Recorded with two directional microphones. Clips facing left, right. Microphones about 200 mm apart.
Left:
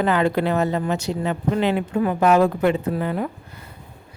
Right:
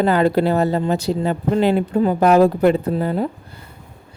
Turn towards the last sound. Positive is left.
turn(degrees=-30)  # may be behind; listen again after turning